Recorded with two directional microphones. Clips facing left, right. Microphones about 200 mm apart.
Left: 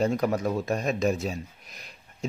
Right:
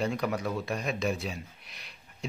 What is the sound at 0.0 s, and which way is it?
A man's voice, 45° left (ahead or behind).